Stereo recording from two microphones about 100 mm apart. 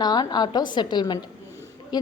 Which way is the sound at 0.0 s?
45° left (ahead or behind).